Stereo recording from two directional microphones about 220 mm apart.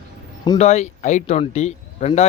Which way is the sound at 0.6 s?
30° left (ahead or behind).